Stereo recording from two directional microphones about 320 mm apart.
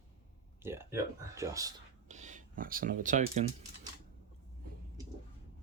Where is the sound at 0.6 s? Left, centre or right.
Centre.